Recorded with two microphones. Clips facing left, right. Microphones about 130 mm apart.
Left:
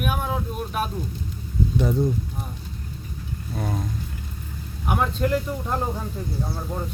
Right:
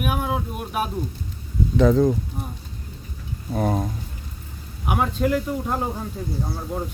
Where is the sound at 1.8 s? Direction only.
90° right.